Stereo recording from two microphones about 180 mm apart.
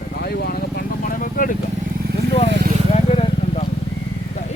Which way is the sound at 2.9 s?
35° left (ahead or behind).